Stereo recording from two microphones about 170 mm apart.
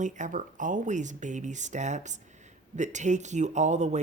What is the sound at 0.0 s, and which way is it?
Speech, 50° right (ahead or behind).